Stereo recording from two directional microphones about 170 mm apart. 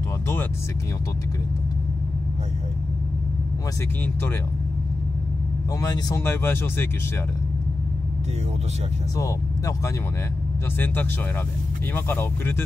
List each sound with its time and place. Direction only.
5.8 s speech: 20° left (ahead or behind)
9.1 s speech: 20° left (ahead or behind)
11.9 s speech: 10° left (ahead or behind)